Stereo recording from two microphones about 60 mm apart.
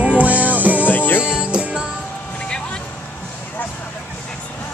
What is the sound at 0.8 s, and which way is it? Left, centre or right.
Music, left.